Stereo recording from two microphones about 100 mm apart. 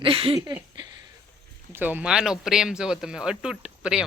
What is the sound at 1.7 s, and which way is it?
Speech, 20° right (ahead or behind).